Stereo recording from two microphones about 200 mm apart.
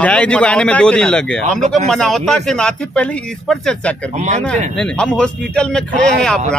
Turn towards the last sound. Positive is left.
turn(degrees=5)  # may be behind; listen again after turning